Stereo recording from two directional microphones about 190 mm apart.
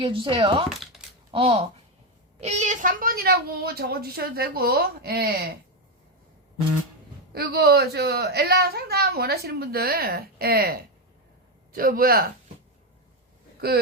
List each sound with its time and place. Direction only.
0.0 s a woman's voice: 30° right (ahead or behind); by 5.3 s 55° right (ahead or behind)
7.3 s a woman's voice: 55° right (ahead or behind)